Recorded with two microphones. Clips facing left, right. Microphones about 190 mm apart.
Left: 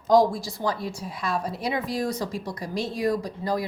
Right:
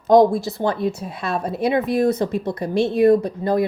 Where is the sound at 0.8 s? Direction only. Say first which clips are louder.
Right 8 dB; 25° right (ahead or behind).